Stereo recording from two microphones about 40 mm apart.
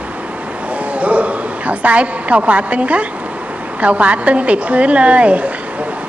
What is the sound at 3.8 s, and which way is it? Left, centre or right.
A woman's voice, right.